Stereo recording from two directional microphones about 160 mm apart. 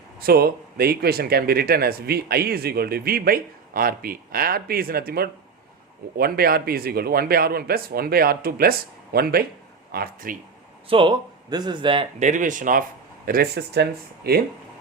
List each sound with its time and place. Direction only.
0.2 s speech: 70° right (ahead or behind)
10.8 s speech: 30° right (ahead or behind)
12.2 s speech: 50° right (ahead or behind)
13.2 s speech: 70° right (ahead or behind)